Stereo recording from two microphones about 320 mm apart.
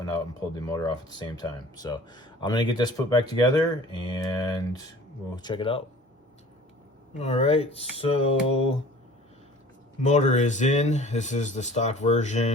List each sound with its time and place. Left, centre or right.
0.6 s speech: centre
7.2 s speech: centre
10.0 s speech: left